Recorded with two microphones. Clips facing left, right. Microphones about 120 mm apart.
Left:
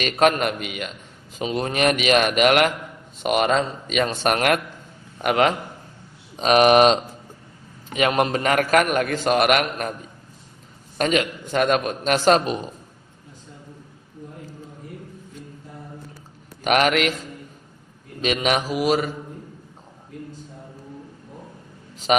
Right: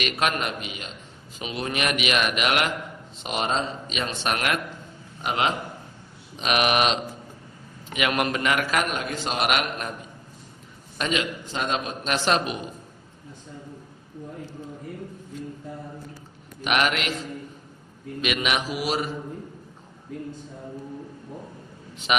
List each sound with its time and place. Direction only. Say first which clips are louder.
0.0 s a man's voice: left 7 dB; 45° left (ahead or behind)
1.4 s a man's voice: left 6 dB; 40° left (ahead or behind)
5.2 s a man's voice: left 6 dB; 60° left (ahead or behind)
6.3 s a man's voice: left 8 dB; 40° left (ahead or behind)
10.9 s a man's voice: left 5 dB; 45° left (ahead or behind)
16.6 s a man's voice: left 5 dB; 45° left (ahead or behind)
18.2 s speech: left 4 dB; 35° left (ahead or behind)
21.9 s speech: left 5 dB; 40° left (ahead or behind)